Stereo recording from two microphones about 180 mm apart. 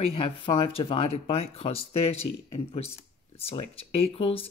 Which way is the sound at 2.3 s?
70° left (ahead or behind).